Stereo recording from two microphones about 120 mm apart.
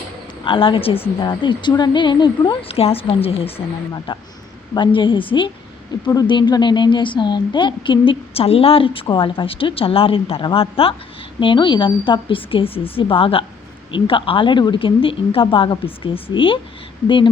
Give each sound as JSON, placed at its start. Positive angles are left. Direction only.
{"t": 0.4, "sound": "a woman's voice", "side_deg": 45}
{"t": 3.9, "sound": "a woman's voice", "side_deg": 35}
{"t": 5.9, "sound": "a woman's voice", "side_deg": 35}